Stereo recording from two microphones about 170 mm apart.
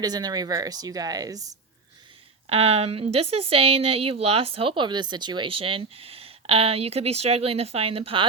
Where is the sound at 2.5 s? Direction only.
35° right (ahead or behind).